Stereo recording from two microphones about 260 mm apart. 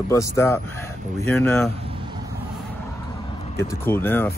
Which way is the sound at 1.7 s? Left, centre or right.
Right.